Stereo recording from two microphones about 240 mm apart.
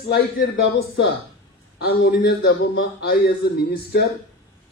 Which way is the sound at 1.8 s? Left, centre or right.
Left.